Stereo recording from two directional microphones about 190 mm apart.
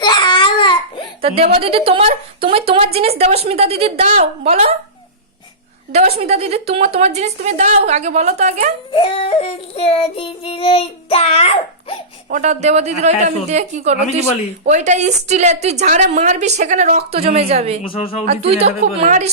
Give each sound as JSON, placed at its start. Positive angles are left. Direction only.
{"t": 0.0, "sound": "baby cry", "side_deg": 25}
{"t": 1.5, "sound": "a woman's voice", "side_deg": -30}
{"t": 5.9, "sound": "a woman's voice", "side_deg": -35}
{"t": 8.9, "sound": "yodeling", "side_deg": 30}
{"t": 12.3, "sound": "a woman's voice", "side_deg": -40}